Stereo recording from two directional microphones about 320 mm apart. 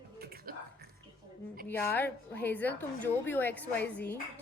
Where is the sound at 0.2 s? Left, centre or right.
Right.